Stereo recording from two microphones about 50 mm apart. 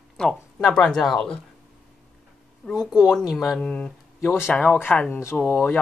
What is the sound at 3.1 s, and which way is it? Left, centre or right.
Speech, centre.